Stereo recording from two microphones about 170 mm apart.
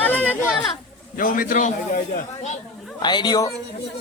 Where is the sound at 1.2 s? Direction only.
55° left (ahead or behind).